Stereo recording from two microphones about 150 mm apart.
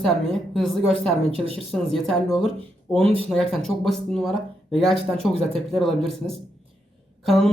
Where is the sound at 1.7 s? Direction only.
Centre (ahead or behind).